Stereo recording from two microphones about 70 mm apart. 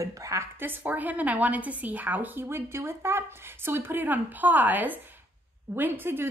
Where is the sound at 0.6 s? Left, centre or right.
Right.